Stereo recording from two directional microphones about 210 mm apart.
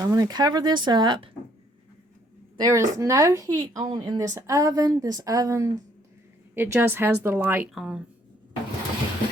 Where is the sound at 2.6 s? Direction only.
15° right (ahead or behind).